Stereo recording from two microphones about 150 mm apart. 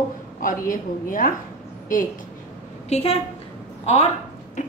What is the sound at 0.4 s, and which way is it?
Speech, 65° left (ahead or behind).